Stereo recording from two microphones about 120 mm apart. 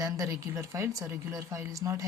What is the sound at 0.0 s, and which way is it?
Speech, 25° right (ahead or behind).